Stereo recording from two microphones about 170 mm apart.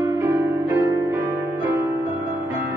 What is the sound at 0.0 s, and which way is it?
Music, 15° right (ahead or behind).